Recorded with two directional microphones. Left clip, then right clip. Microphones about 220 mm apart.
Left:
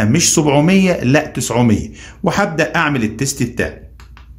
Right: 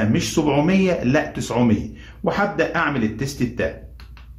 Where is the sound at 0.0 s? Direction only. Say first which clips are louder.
Left 6 dB; 40° left (ahead or behind).